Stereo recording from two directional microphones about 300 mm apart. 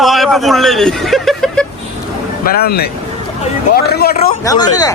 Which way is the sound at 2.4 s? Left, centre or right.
Left.